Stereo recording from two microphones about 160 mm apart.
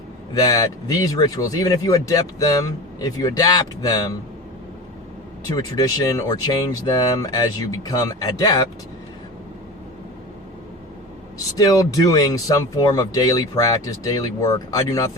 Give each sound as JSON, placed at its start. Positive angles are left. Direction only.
{"t": 0.3, "sound": "speech", "side_deg": 20}
{"t": 5.5, "sound": "speech", "side_deg": 25}
{"t": 11.5, "sound": "speech", "side_deg": 20}